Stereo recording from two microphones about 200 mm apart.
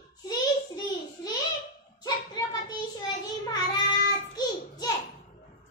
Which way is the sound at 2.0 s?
20° left (ahead or behind).